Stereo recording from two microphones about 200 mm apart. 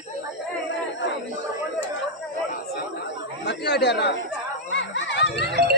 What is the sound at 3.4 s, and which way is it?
Chatter, 55° left (ahead or behind).